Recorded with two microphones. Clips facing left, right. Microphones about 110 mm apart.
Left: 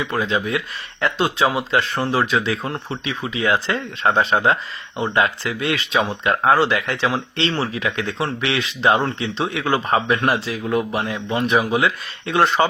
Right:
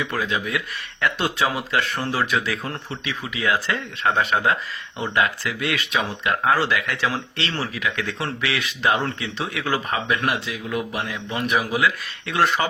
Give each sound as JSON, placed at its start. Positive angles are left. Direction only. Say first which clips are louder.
{"t": 0.0, "sound": "speech", "louder": "left 4 dB", "side_deg": 25}